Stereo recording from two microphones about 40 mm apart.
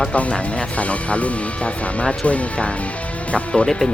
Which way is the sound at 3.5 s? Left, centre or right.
Centre.